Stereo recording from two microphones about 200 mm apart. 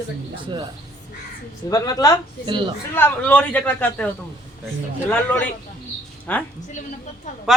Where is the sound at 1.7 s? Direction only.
20° left (ahead or behind).